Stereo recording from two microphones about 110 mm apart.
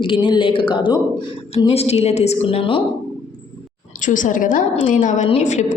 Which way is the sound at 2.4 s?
55° left (ahead or behind).